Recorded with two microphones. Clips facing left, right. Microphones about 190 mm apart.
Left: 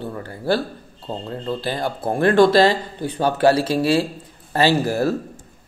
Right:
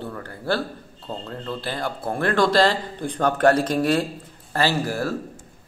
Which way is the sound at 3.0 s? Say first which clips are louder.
Left 1 dB; 5° left (ahead or behind).